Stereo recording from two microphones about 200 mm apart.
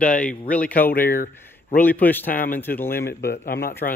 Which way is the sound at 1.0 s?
45° left (ahead or behind).